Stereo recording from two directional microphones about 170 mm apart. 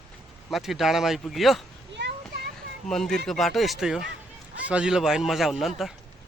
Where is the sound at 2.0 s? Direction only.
90° right.